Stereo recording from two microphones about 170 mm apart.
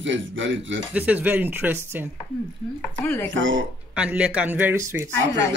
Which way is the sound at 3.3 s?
90° right.